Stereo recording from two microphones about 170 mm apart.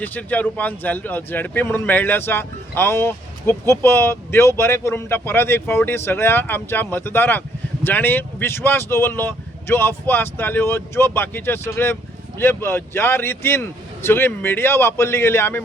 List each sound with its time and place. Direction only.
0.0 s speech: 10° left (ahead or behind)